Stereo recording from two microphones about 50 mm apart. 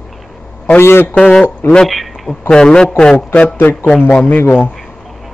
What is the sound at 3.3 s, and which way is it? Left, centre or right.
Speech, left.